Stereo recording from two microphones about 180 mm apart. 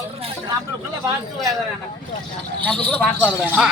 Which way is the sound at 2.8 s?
10° left (ahead or behind).